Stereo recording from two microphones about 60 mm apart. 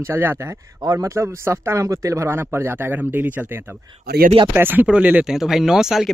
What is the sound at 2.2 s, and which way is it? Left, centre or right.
Speech, right.